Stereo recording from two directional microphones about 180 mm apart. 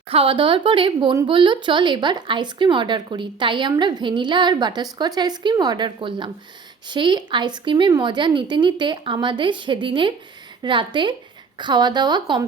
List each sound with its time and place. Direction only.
0.1 s speech: 30° right (ahead or behind)